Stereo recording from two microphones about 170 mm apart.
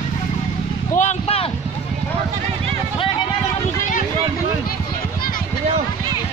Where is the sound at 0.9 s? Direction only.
40° left (ahead or behind).